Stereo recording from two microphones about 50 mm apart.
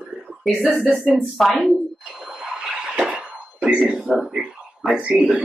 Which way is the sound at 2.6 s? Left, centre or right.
Right.